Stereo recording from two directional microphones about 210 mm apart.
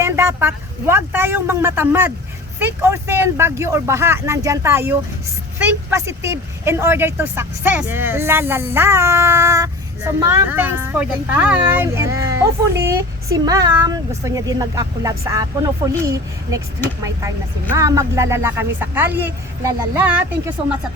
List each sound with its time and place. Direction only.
0.0 s speech: 10° right (ahead or behind)